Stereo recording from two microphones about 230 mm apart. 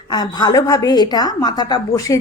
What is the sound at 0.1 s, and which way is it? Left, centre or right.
A woman's voice, centre.